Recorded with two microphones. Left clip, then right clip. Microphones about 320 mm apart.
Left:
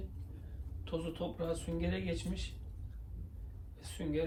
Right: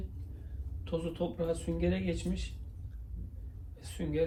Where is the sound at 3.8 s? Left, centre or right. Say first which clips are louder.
Right 3 dB; centre.